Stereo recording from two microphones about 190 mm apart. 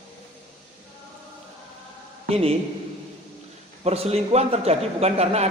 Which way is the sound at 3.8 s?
35° right (ahead or behind).